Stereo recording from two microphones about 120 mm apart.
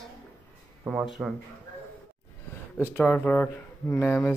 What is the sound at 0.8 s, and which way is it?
Music, 5° right (ahead or behind).